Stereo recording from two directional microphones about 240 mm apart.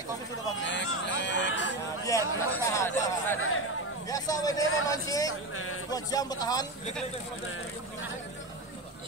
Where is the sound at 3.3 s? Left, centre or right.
Left.